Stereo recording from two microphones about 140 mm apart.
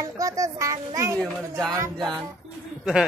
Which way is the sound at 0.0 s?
25° right (ahead or behind).